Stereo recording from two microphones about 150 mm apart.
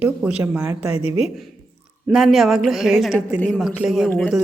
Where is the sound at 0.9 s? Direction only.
45° left (ahead or behind).